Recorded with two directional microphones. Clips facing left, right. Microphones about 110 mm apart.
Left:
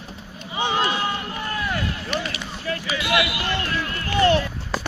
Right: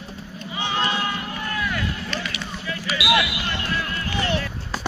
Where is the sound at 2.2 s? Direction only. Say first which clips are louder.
Left 2 dB; 45° left (ahead or behind).